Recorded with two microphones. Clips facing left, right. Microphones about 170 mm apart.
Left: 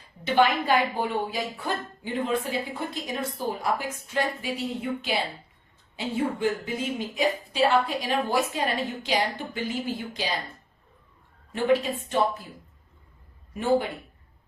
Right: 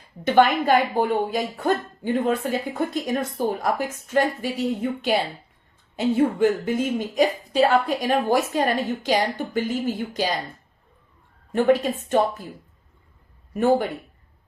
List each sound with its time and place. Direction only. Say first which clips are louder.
0.3 s speech: right 5 dB; 50° right (ahead or behind)
11.5 s speech: right 4 dB; 45° right (ahead or behind)
13.5 s speech: right 4 dB; 50° right (ahead or behind)